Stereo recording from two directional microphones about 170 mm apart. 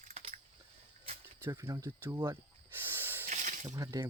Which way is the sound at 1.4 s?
20° right (ahead or behind).